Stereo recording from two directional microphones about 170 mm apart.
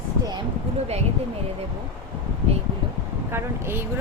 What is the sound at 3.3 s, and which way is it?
Speech, 15° right (ahead or behind).